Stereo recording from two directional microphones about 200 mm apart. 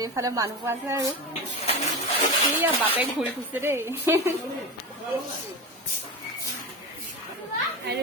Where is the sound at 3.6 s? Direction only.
10° right (ahead or behind).